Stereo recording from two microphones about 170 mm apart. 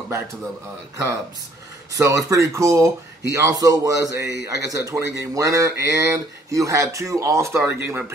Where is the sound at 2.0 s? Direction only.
20° right (ahead or behind).